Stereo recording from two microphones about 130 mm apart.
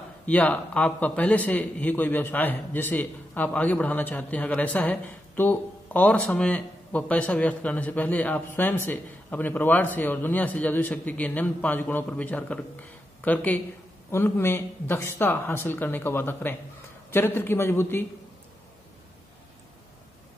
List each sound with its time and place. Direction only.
0.3 s a man's voice: 10° left (ahead or behind)